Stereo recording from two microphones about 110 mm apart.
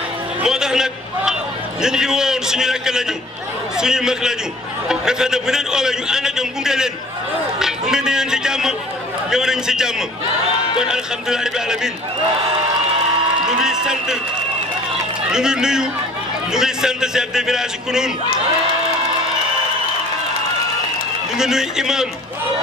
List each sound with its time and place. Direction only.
0.4 s a man's voice: 5° right (ahead or behind)
13.5 s a man's voice: 5° right (ahead or behind)
15.3 s a man's voice: 5° right (ahead or behind)
21.4 s a man's voice: 5° right (ahead or behind)